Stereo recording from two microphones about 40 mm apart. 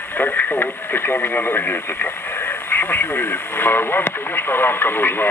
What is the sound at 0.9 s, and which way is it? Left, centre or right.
Speech, left.